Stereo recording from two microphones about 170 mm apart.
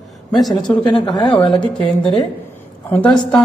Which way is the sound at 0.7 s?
25° left (ahead or behind).